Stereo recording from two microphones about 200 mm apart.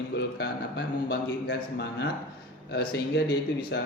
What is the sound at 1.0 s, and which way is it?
A man's voice, 55° left (ahead or behind).